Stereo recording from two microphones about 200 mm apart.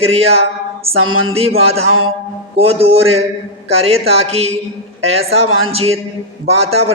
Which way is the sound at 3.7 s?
30° right (ahead or behind).